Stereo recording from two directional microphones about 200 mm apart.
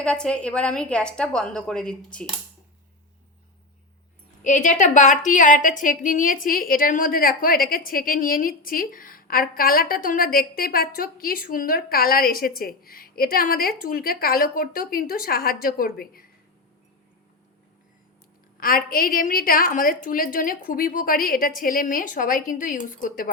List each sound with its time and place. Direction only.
0.0 s a woman's voice: 5° left (ahead or behind)
4.4 s a woman's voice: 40° left (ahead or behind)
18.6 s a woman's voice: 45° left (ahead or behind)